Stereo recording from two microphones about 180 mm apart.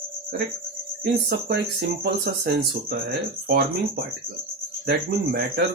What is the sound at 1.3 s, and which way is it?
Speech, 60° right (ahead or behind).